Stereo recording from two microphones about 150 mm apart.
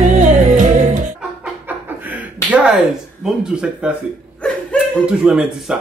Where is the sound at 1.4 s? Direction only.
10° right (ahead or behind).